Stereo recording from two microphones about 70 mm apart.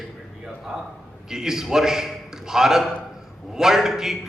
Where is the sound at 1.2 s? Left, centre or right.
Centre.